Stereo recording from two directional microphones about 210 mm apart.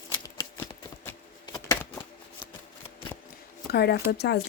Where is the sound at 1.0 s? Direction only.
10° left (ahead or behind).